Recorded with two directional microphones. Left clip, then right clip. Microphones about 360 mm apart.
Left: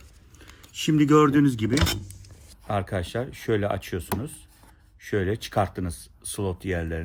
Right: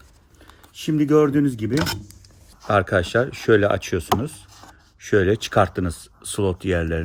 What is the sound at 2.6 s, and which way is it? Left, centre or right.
Speech, right.